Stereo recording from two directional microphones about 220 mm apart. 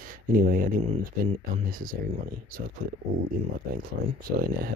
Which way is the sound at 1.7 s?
40° right (ahead or behind).